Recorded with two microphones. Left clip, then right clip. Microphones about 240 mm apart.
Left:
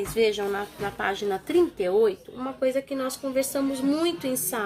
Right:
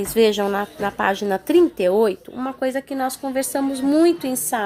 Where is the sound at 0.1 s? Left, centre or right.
Right.